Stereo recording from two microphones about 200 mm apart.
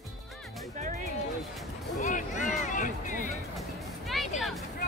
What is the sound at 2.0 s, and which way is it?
Music, 40° left (ahead or behind).